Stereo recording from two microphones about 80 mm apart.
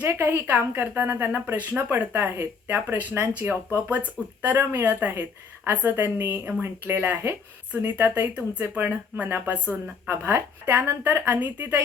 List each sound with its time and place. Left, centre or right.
0.0 s speech: right
8.3 s speech: centre
8.6 s speech: right
10.1 s speech: right